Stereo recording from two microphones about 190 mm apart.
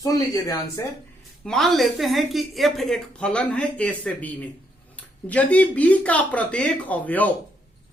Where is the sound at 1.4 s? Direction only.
Centre (ahead or behind).